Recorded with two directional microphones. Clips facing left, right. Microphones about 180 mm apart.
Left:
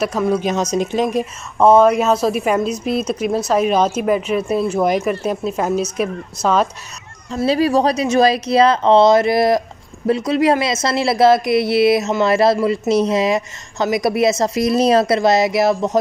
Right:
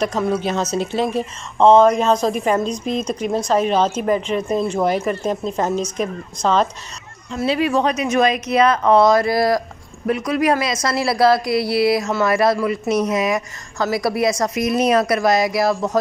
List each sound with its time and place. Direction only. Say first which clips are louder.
0.0 s speech: left 2 dB; 10° left (ahead or behind)
7.2 s a woman's voice: left 3 dB; 40° left (ahead or behind); by 16.0 s 20° left (ahead or behind)